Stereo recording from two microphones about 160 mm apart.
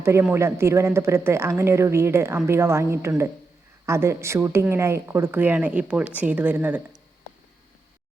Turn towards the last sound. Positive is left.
turn(degrees=-10)  # may be behind; listen again after turning